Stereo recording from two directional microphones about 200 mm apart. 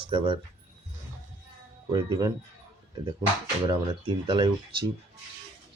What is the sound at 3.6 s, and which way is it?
Speech, 25° right (ahead or behind).